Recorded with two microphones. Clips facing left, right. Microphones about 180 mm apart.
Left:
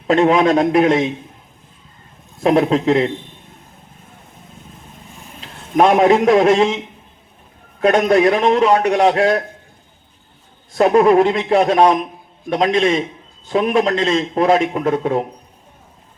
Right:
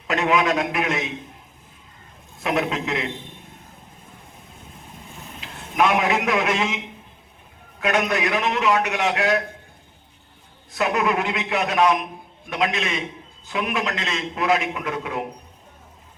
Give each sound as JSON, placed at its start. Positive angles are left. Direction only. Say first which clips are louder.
{"t": 0.1, "sound": "a man's voice", "louder": "left 8 dB", "side_deg": 30}
{"t": 2.4, "sound": "a man's voice", "louder": "left 10 dB", "side_deg": 35}
{"t": 5.4, "sound": "a man's voice", "louder": "left 7 dB", "side_deg": 35}
{"t": 10.7, "sound": "a man's voice", "louder": "left 10 dB", "side_deg": 35}